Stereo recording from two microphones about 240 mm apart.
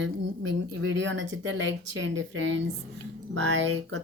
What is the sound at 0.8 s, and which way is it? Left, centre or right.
Speech, right.